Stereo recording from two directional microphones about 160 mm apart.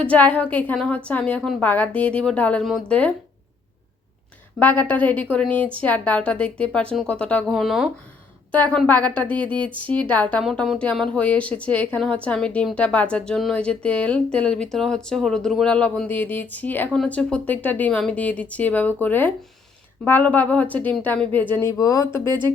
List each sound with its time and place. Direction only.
0.0 s a woman's voice: 10° left (ahead or behind)
4.6 s a woman's voice: 10° left (ahead or behind)
8.5 s a woman's voice: 10° left (ahead or behind)
22.3 s speech: 25° right (ahead or behind)